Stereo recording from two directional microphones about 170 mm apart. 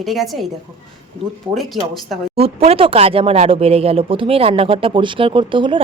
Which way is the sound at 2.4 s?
35° right (ahead or behind).